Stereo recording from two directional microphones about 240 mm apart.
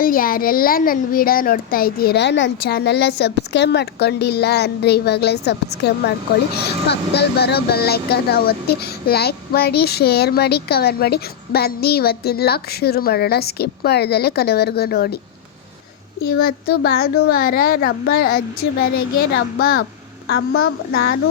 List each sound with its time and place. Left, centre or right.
0.0 s a child's voice: left
16.4 s speech: left
19.3 s a child's voice: left
20.9 s a child's voice: left